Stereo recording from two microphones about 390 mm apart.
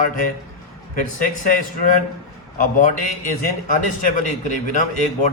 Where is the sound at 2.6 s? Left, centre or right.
Centre.